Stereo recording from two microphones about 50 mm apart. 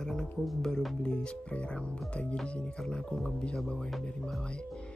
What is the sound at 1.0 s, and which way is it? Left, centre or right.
Speech, centre.